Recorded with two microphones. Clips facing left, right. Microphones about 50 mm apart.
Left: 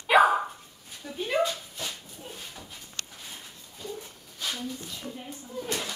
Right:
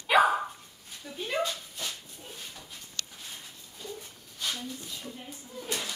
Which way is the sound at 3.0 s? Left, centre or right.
Left.